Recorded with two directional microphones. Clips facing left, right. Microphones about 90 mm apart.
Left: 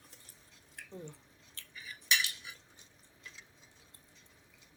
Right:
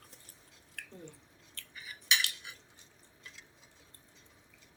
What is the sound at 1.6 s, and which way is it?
Cutlery, 20° left (ahead or behind).